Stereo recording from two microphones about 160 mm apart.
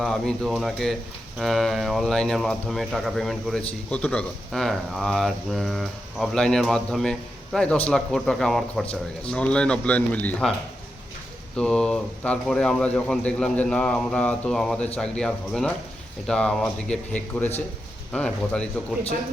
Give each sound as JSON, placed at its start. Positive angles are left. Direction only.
{"t": 0.0, "sound": "speech", "side_deg": 5}
{"t": 11.5, "sound": "speech", "side_deg": 5}